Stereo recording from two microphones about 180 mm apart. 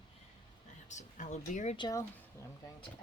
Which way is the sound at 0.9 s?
40° left (ahead or behind).